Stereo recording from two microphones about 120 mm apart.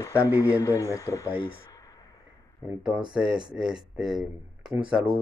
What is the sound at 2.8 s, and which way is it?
Speech, 40° right (ahead or behind).